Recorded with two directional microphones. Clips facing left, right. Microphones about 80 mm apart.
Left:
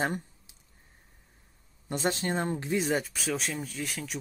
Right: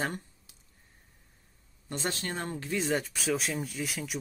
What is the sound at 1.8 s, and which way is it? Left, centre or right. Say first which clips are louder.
Speech: left 5 dB; centre.